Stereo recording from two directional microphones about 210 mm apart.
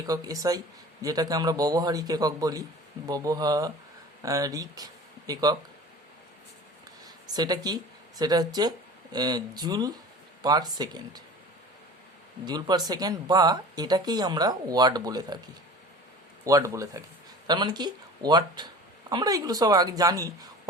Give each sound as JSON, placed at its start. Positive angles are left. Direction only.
{"t": 0.0, "sound": "speech", "side_deg": -15}
{"t": 7.3, "sound": "speech", "side_deg": -20}
{"t": 12.5, "sound": "speech", "side_deg": -20}
{"t": 16.4, "sound": "speech", "side_deg": -15}